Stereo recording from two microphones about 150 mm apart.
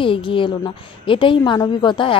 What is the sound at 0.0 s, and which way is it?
A woman's voice, 35° left (ahead or behind).